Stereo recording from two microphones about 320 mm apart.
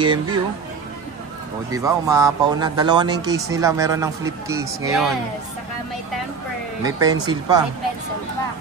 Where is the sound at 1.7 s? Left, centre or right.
Centre.